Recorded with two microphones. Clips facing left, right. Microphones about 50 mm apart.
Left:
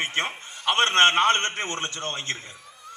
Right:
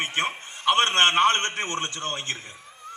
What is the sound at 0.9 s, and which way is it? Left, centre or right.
Speech, left.